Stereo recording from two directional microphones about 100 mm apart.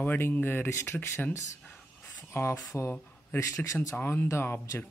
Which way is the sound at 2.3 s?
25° left (ahead or behind).